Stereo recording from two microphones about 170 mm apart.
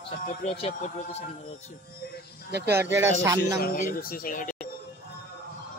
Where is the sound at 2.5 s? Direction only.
75° right (ahead or behind).